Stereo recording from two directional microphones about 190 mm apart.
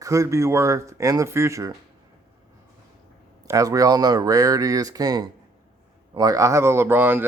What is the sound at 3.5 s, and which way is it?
Speech, 20° right (ahead or behind).